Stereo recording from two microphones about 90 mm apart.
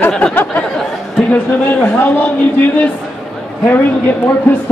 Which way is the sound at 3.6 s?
20° left (ahead or behind).